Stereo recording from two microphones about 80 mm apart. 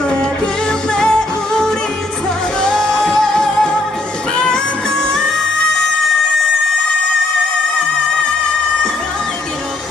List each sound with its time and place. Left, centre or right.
0.9 s music: centre
8.4 s music: centre